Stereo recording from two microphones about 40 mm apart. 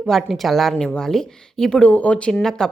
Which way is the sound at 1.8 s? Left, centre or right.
Left.